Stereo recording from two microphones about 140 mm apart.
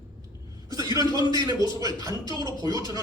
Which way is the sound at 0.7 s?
25° right (ahead or behind).